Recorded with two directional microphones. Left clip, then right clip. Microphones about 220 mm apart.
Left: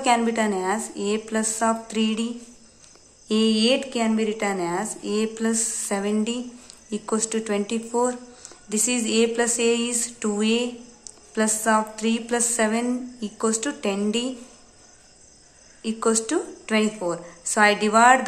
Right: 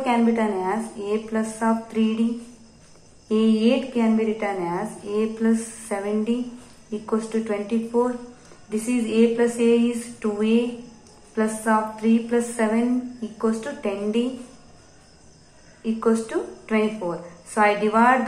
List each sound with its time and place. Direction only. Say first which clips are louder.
0.0 s a woman's voice: left 1 dB; 45° left (ahead or behind)
3.3 s a woman's voice: even; 45° left (ahead or behind)
15.8 s a woman's voice: right 1 dB; 45° left (ahead or behind)